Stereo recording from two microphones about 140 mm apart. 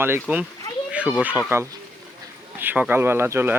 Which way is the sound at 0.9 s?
5° right (ahead or behind).